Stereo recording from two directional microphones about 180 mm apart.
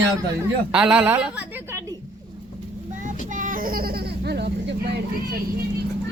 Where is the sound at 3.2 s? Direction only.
45° right (ahead or behind); by 4.5 s 65° right (ahead or behind).